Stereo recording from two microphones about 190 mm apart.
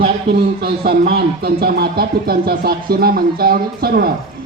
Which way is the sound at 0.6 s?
55° right (ahead or behind).